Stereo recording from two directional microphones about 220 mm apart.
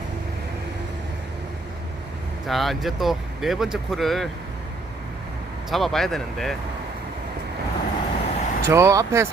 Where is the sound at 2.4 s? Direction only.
Centre (ahead or behind).